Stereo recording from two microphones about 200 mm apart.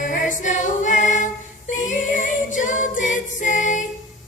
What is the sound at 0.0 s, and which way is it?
Choir, 40° left (ahead or behind).